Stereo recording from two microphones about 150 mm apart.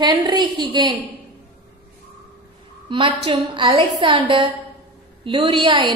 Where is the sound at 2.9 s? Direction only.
35° right (ahead or behind).